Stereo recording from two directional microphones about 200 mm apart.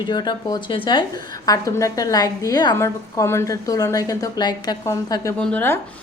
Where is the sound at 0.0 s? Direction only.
20° left (ahead or behind).